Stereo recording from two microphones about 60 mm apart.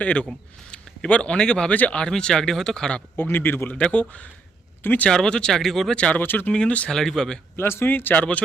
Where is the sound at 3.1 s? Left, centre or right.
Left.